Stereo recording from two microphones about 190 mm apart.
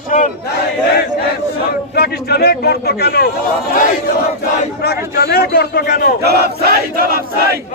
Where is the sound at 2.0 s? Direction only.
55° left (ahead or behind).